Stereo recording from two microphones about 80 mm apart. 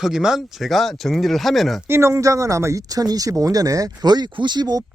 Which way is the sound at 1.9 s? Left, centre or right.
Right.